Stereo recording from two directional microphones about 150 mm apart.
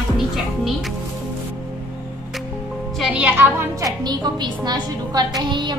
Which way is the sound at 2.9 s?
5° right (ahead or behind).